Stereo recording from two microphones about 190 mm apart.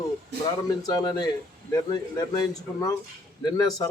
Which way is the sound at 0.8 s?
20° left (ahead or behind).